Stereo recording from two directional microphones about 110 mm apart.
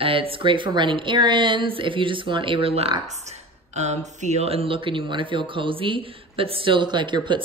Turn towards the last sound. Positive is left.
turn(degrees=-45)  # may be behind; listen again after turning